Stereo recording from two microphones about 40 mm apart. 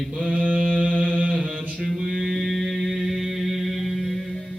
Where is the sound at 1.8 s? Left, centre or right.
Centre.